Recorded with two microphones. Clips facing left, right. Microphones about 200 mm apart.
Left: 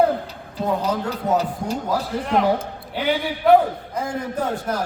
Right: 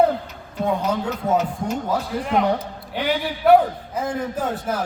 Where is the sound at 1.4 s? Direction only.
35° left (ahead or behind).